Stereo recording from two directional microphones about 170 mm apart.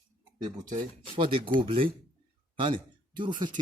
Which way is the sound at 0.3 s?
25° right (ahead or behind).